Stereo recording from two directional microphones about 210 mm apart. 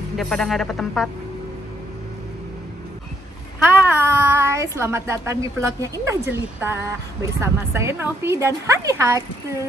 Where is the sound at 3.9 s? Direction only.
10° right (ahead or behind).